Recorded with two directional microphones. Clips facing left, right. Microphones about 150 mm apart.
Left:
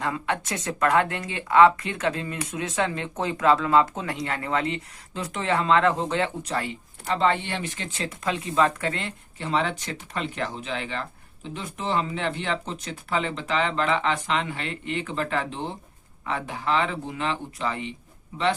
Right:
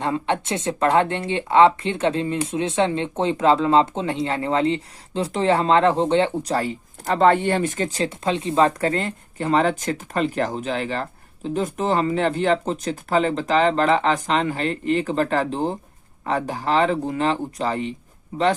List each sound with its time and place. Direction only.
0.0 s speech: 25° right (ahead or behind)
18.3 s a man's voice: 55° right (ahead or behind)